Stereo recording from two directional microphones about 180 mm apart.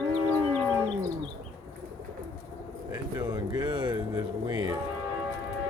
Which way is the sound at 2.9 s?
20° right (ahead or behind).